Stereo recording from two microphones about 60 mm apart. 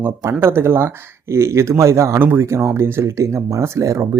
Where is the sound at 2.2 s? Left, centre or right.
Right.